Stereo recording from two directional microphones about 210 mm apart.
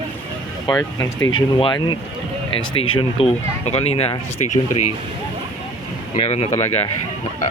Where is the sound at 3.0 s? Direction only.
30° left (ahead or behind).